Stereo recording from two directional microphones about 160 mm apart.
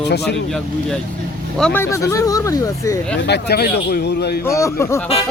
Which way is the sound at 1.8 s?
20° left (ahead or behind).